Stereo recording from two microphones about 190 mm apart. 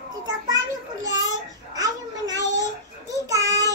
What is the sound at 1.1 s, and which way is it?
Child singing, 20° right (ahead or behind).